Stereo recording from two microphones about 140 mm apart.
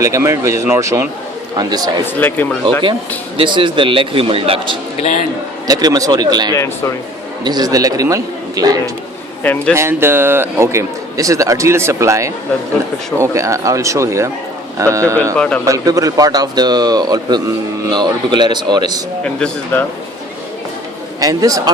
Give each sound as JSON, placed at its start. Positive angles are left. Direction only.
{"t": 0.0, "sound": "a man's voice", "side_deg": -20}
{"t": 2.1, "sound": "a man's voice", "side_deg": 10}
{"t": 3.3, "sound": "a man's voice", "side_deg": -35}
{"t": 5.6, "sound": "a man's voice", "side_deg": -25}
{"t": 9.4, "sound": "a man's voice", "side_deg": 10}
{"t": 9.7, "sound": "a man's voice", "side_deg": -20}
{"t": 15.4, "sound": "a man's voice", "side_deg": 10}
{"t": 15.6, "sound": "a man's voice", "side_deg": -25}
{"t": 19.2, "sound": "a man's voice", "side_deg": 5}
{"t": 21.2, "sound": "a man's voice", "side_deg": -25}